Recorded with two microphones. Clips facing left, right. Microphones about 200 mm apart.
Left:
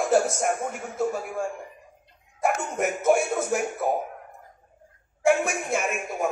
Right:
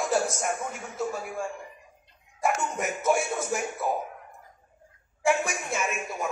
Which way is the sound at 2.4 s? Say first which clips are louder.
Left 3 dB; 55° left (ahead or behind).